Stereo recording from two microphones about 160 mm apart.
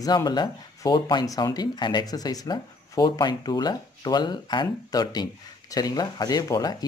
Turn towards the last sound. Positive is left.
turn(degrees=25)  # may be behind; listen again after turning